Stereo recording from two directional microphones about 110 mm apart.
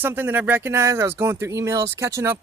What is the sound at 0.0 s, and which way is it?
Speech, 20° right (ahead or behind).